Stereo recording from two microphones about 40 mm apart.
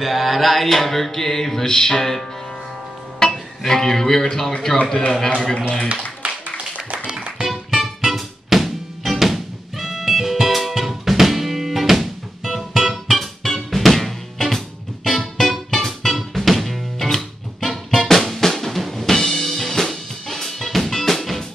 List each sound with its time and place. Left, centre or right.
0.0 s music: centre
3.2 s speech: centre
6.2 s music: right
7.4 s music: centre